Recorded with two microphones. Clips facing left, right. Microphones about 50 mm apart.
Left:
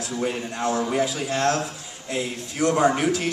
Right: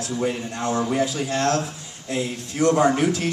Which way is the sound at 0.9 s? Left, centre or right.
Centre.